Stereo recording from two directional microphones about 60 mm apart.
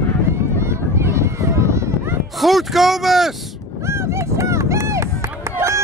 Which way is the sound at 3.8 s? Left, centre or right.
Right.